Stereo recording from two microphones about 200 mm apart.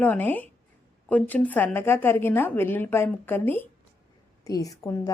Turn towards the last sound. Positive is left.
turn(degrees=15)  # may be behind; listen again after turning